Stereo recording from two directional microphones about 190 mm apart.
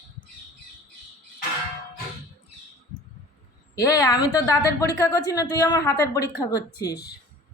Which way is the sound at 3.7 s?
20° left (ahead or behind).